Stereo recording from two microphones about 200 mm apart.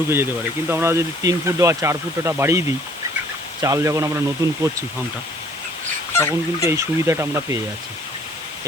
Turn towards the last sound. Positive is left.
turn(degrees=-15)  # may be behind; listen again after turning